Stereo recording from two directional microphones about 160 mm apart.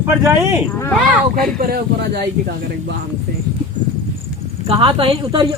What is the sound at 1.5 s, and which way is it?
Speech, 70° right (ahead or behind).